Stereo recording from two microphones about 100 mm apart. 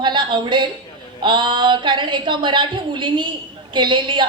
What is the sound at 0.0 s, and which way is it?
A woman's voice, 50° right (ahead or behind).